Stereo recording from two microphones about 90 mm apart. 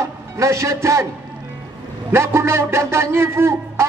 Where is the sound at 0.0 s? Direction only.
35° right (ahead or behind).